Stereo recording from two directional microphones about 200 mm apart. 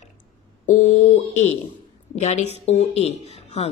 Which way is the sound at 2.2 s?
35° left (ahead or behind).